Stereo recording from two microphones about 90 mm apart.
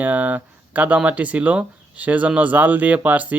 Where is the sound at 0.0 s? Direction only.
20° right (ahead or behind).